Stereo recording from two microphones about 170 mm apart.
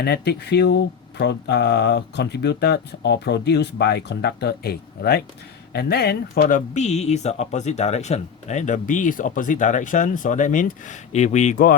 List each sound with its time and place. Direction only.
0.0 s speech: 70° left (ahead or behind)
6.5 s speech: 45° left (ahead or behind)